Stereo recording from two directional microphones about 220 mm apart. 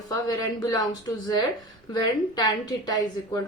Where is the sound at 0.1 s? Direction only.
15° left (ahead or behind).